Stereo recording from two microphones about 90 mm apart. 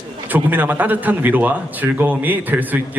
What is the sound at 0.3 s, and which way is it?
A man's voice, 20° right (ahead or behind).